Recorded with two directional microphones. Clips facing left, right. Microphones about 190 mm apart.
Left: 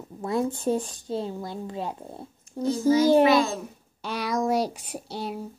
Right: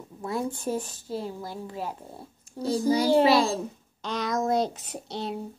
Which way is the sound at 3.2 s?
30° right (ahead or behind).